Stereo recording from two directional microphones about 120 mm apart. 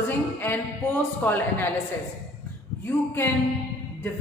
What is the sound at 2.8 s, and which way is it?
Speech, 20° left (ahead or behind).